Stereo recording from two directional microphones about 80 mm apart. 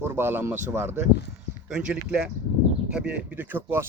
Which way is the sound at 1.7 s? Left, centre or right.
Centre.